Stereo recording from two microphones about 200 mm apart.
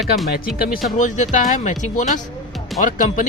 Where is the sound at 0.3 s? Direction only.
50° left (ahead or behind).